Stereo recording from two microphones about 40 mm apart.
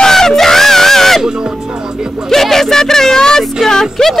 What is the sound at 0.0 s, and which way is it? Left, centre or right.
Crowd, centre.